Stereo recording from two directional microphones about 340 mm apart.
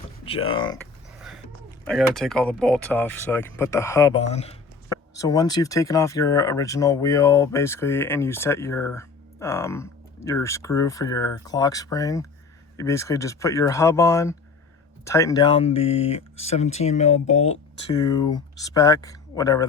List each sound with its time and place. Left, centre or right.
0.3 s speech: centre
1.8 s speech: centre